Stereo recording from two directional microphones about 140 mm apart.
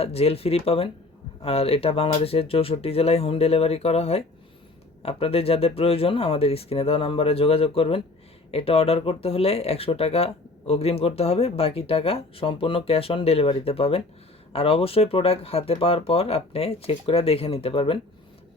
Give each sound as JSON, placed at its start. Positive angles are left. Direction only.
{"t": 0.0, "sound": "speech", "side_deg": 45}